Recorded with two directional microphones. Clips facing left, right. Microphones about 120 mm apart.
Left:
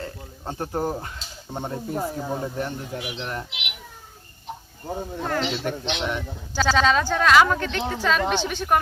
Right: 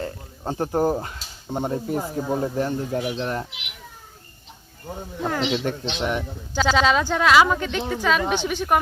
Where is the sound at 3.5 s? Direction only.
75° left (ahead or behind).